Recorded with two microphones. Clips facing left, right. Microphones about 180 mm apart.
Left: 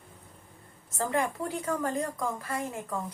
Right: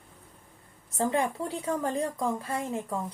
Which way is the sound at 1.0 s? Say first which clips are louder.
Right 2 dB; 30° right (ahead or behind).